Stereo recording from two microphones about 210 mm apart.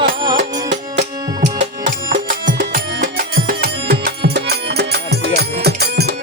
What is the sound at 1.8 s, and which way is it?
Music, 55° right (ahead or behind).